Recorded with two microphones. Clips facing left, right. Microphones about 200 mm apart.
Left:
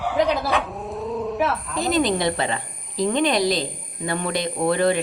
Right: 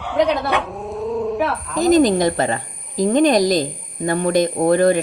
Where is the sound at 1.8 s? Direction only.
45° right (ahead or behind).